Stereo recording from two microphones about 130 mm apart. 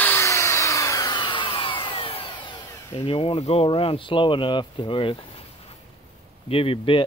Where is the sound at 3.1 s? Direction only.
45° left (ahead or behind).